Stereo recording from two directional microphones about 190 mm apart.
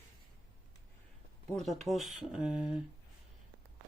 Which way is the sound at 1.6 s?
Centre (ahead or behind).